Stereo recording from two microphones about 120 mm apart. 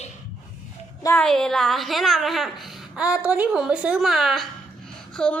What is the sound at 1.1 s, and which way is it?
A woman's voice, 5° left (ahead or behind).